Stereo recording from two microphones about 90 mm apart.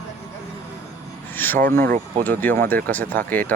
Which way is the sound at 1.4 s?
20° left (ahead or behind).